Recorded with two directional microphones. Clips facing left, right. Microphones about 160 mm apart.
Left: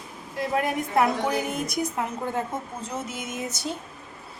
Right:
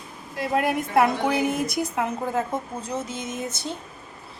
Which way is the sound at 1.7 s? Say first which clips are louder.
Right 2 dB; 5° right (ahead or behind).